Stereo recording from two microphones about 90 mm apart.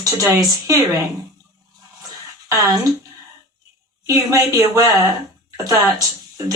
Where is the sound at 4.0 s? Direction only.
35° right (ahead or behind).